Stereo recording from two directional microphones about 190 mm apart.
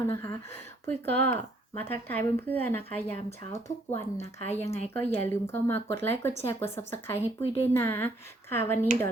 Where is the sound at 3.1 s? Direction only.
35° left (ahead or behind).